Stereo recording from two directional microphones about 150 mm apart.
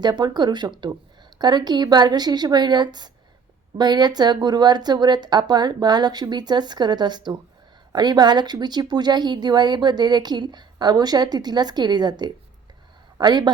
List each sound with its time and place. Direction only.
0.0 s a woman's voice: 30° right (ahead or behind)